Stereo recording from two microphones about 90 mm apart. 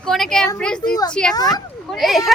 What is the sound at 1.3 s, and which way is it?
Speech, 45° left (ahead or behind).